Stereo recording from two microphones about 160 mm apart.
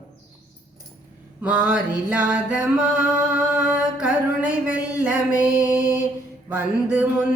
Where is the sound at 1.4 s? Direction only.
10° right (ahead or behind).